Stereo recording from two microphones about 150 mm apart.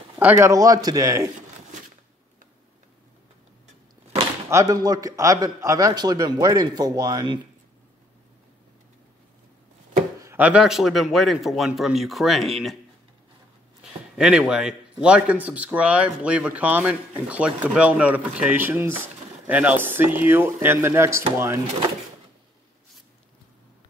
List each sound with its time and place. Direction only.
0.2 s a man's voice: 15° right (ahead or behind)
4.5 s a man's voice: 25° right (ahead or behind)
10.2 s a man's voice: 10° right (ahead or behind)
14.1 s speech: 5° right (ahead or behind)